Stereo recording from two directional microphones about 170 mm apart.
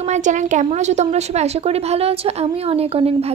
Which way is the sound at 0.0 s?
45° right (ahead or behind).